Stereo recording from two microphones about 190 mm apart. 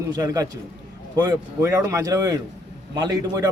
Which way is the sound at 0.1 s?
20° right (ahead or behind).